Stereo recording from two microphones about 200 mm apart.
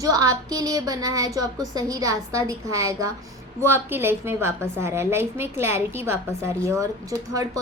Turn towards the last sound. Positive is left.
turn(degrees=-15)  # may be behind; listen again after turning